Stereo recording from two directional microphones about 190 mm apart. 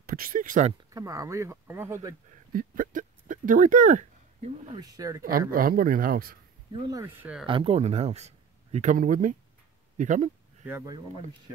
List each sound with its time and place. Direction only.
0.0 s speech: 50° right (ahead or behind)
0.9 s speech: 15° right (ahead or behind)
2.5 s speech: 45° right (ahead or behind)
4.7 s speech: 20° right (ahead or behind)
5.5 s speech: 50° right (ahead or behind)
6.7 s speech: 20° right (ahead or behind)
7.4 s speech: 30° right (ahead or behind)